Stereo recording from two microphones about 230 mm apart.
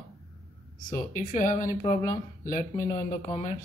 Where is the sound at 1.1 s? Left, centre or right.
Left.